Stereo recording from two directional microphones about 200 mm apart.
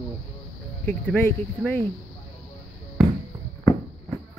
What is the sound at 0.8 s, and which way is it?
Speech, 5° left (ahead or behind).